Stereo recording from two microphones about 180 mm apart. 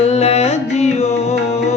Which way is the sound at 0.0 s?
35° left (ahead or behind).